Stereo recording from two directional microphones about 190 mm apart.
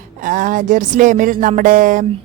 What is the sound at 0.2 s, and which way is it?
Speech, 45° right (ahead or behind).